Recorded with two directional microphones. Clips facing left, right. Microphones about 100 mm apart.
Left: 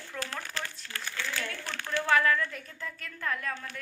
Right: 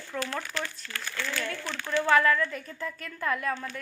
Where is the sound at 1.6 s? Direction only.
50° left (ahead or behind).